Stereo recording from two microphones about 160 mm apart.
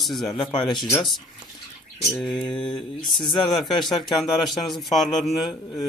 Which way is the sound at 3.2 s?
30° left (ahead or behind).